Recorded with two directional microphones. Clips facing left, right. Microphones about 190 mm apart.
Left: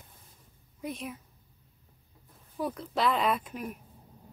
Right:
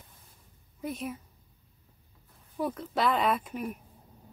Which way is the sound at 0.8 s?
Centre (ahead or behind).